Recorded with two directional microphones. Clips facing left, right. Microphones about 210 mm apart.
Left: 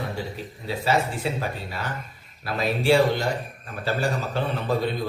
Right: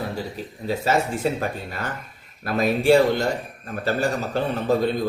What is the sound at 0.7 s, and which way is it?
Speech, 45° right (ahead or behind).